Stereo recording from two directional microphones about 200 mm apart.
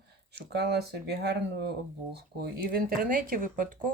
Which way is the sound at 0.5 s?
55° right (ahead or behind).